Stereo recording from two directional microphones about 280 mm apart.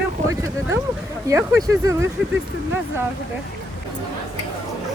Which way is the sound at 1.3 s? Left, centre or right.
Centre.